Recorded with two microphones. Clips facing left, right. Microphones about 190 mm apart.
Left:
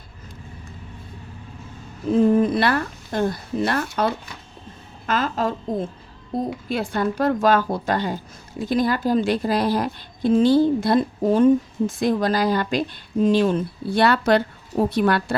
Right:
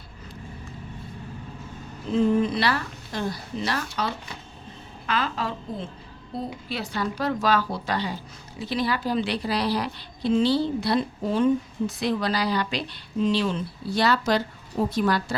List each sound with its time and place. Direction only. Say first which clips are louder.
2.1 s speech: left 4 dB; 50° left (ahead or behind)